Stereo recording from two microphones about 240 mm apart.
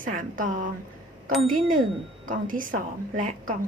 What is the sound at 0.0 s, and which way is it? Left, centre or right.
Speech, right.